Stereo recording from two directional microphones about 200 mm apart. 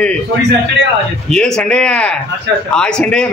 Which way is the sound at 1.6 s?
5° left (ahead or behind).